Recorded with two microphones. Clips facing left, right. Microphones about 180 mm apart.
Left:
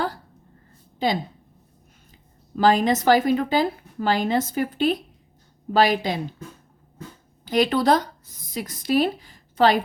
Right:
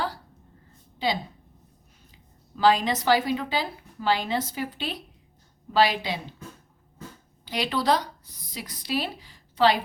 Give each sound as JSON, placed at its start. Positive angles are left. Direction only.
{"t": 0.9, "sound": "speech", "side_deg": 50}
{"t": 2.6, "sound": "a woman's voice", "side_deg": 50}
{"t": 7.4, "sound": "a woman's voice", "side_deg": 50}